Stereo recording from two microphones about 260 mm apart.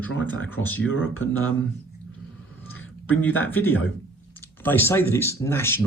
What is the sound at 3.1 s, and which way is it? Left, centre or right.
Speech, centre.